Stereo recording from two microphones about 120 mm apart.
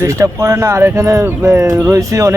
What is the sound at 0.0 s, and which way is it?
A man's voice, 25° right (ahead or behind).